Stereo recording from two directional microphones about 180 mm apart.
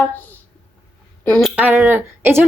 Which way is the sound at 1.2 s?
5° left (ahead or behind).